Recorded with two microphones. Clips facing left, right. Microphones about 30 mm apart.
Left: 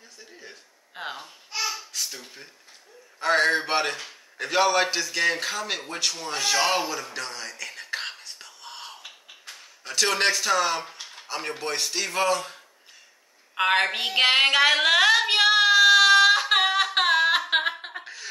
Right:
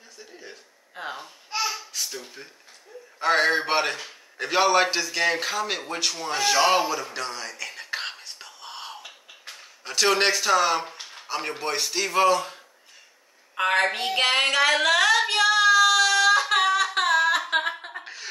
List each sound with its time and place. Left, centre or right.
0.2 s a sound: centre
1.0 s baby cry: left
1.5 s babbling: centre
1.8 s babbling: centre
3.2 s a man's voice: centre
13.6 s a woman's voice: left
14.0 s child singing: centre
17.5 s a sound: left
18.0 s a sound: centre